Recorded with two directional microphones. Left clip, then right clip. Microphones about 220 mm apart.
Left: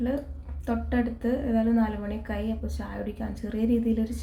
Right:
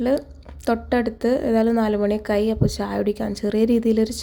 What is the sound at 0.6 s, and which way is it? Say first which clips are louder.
A woman's voice: right 8 dB; 45° right (ahead or behind).